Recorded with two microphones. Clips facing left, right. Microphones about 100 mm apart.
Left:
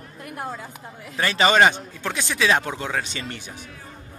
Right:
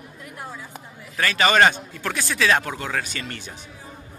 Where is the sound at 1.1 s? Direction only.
20° left (ahead or behind).